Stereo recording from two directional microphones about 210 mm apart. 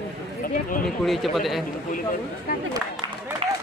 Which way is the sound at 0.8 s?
Centre (ahead or behind).